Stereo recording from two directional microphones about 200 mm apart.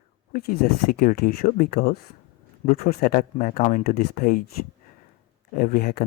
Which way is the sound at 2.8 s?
40° left (ahead or behind).